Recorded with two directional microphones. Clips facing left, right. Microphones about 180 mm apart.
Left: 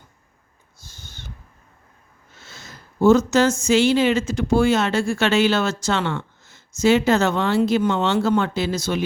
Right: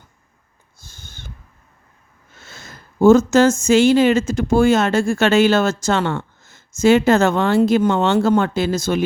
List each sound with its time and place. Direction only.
0.8 s owl: 50° right (ahead or behind)
2.4 s speech: 50° right (ahead or behind)